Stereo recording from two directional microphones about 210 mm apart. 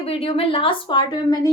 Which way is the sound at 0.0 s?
25° left (ahead or behind).